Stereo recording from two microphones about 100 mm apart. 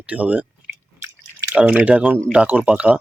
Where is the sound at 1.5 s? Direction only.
10° right (ahead or behind).